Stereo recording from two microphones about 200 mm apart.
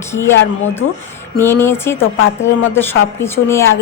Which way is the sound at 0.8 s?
85° left.